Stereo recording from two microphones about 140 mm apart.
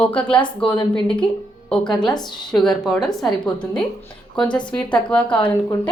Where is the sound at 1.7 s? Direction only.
5° left (ahead or behind).